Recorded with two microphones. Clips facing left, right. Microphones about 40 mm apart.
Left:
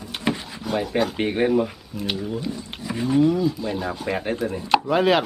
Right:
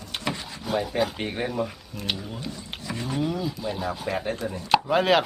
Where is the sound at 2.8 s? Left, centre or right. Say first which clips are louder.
Left 3 dB; centre.